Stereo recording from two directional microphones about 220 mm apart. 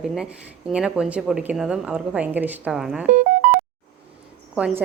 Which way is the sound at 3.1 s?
35° right (ahead or behind).